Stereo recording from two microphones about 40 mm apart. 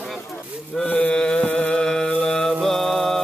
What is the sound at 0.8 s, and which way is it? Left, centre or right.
Mantra, centre.